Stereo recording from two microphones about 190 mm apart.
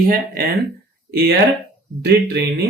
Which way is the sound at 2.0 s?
60° right (ahead or behind).